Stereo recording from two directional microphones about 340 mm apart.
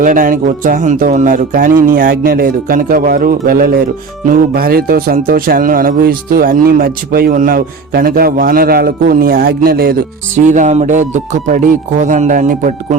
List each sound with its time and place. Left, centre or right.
0.0 s speech: right